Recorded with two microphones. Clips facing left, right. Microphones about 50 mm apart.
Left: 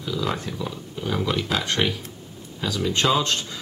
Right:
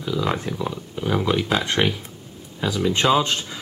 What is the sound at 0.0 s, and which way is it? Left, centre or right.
Speech, centre.